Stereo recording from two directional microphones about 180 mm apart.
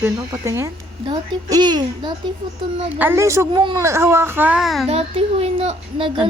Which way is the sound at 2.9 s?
10° right (ahead or behind).